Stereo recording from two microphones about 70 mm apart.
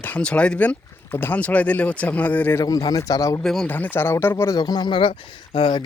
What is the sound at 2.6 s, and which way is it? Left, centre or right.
Speech, left.